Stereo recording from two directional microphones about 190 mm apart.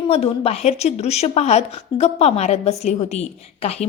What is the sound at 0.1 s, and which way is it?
A woman's voice, 30° left (ahead or behind).